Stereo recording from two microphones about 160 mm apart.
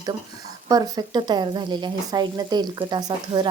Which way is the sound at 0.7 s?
25° right (ahead or behind).